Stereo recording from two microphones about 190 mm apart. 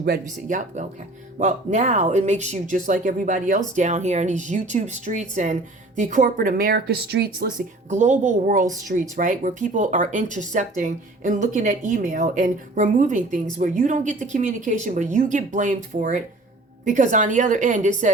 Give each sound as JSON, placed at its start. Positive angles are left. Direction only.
{"t": 0.4, "sound": "speech", "side_deg": -40}
{"t": 7.9, "sound": "speech", "side_deg": -40}